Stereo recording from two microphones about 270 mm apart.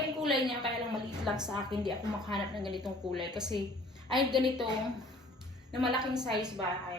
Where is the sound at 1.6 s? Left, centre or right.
Centre.